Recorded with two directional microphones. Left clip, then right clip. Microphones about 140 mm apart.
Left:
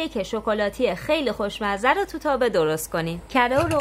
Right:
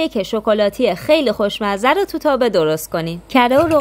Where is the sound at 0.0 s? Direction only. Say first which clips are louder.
Right 8 dB; 40° right (ahead or behind).